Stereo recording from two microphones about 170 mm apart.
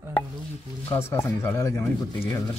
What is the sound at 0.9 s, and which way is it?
Speech, 15° left (ahead or behind).